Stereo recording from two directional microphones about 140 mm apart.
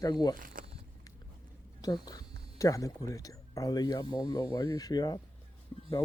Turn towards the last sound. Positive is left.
turn(degrees=25)  # may be behind; listen again after turning